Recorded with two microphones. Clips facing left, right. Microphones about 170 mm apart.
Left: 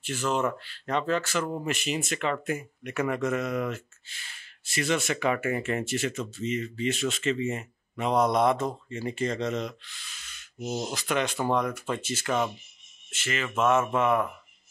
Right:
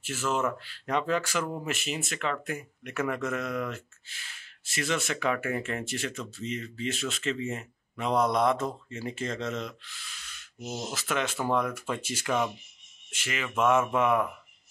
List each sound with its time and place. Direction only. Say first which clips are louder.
0.0 s speech: left 2 dB; 5° right (ahead or behind)
10.7 s speech: left 4 dB; 15° left (ahead or behind)
11.0 s speech: left 1 dB; 5° right (ahead or behind)